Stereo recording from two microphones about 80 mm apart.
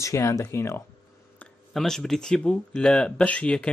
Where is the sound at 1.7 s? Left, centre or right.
Centre.